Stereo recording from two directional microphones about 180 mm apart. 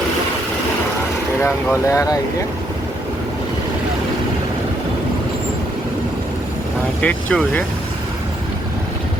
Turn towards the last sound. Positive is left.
turn(degrees=10)  # may be behind; listen again after turning